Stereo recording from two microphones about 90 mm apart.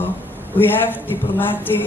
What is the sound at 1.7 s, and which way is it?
Speech, 35° left (ahead or behind).